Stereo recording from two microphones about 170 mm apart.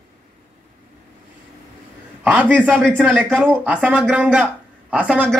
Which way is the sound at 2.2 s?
10° right (ahead or behind).